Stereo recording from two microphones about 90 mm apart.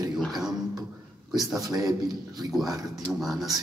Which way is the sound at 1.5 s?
40° right (ahead or behind).